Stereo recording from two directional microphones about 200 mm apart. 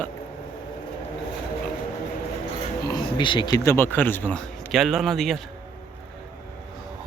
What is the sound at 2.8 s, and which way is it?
Speech, 25° left (ahead or behind).